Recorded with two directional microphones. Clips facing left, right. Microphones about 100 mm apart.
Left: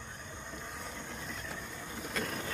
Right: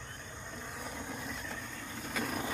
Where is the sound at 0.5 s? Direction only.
Centre (ahead or behind).